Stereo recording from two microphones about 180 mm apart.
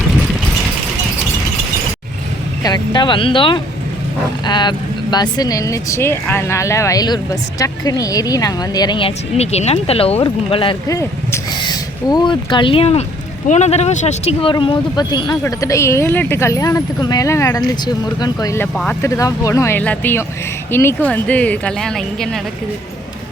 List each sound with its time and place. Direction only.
0.1 s a sound: centre (ahead or behind)
2.6 s speech: 25° left (ahead or behind)
14.5 s speech: 25° left (ahead or behind); by 18.9 s 5° left (ahead or behind)
19.0 s speech: 15° left (ahead or behind)